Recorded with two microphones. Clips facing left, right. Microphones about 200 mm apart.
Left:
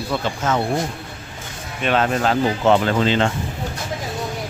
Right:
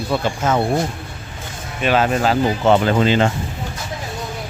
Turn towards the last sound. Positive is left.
turn(degrees=-10)  # may be behind; listen again after turning